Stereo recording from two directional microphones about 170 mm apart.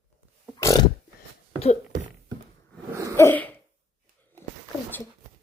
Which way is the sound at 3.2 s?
10° left (ahead or behind).